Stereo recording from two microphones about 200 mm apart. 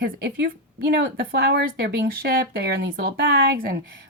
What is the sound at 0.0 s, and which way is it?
Speech, 55° right (ahead or behind).